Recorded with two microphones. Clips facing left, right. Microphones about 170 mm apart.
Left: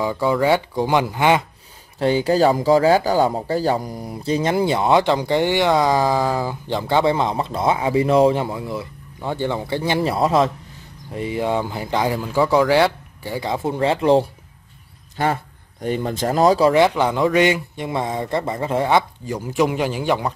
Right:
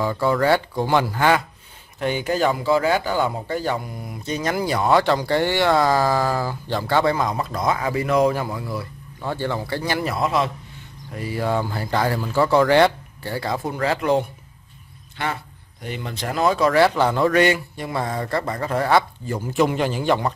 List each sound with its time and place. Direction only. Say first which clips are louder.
0.0 s speech: left 1 dB; 15° left (ahead or behind)
2.0 s speech: left 5 dB; 30° left (ahead or behind)
11.1 s speech: left 2 dB; 25° left (ahead or behind)
15.2 s a man's voice: left 6 dB; 40° left (ahead or behind)
16.7 s speech: left 1 dB; 15° left (ahead or behind)